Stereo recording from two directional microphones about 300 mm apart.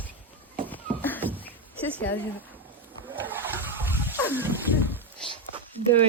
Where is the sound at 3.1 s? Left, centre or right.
Centre.